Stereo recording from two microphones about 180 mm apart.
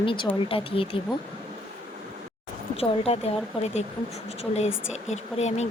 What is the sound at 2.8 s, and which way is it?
Speech, 35° left (ahead or behind).